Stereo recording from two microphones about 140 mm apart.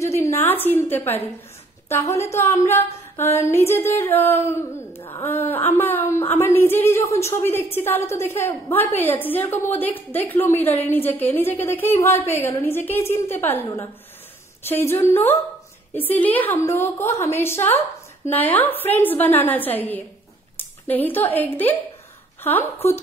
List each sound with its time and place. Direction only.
0.0 s a woman's voice: 20° left (ahead or behind)
14.6 s a woman's voice: 15° left (ahead or behind)